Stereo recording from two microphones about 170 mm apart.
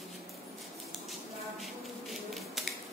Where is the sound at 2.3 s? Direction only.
Centre (ahead or behind).